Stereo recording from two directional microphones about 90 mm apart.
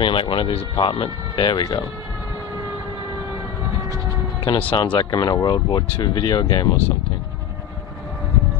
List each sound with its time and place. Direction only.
0.0 s speech: 65° left (ahead or behind)
4.5 s speech: 70° left (ahead or behind); by 6.7 s 50° left (ahead or behind)